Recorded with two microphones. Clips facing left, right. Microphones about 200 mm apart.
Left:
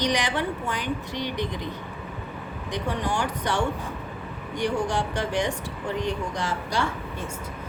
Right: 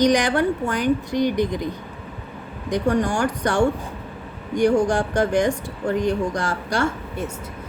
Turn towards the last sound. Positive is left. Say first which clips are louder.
# right 4 dB
turn(degrees=-45)  # may be behind; listen again after turning